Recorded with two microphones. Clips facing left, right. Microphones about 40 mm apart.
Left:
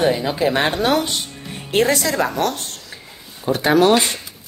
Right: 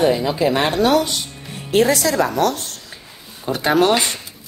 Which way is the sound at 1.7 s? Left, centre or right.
Left.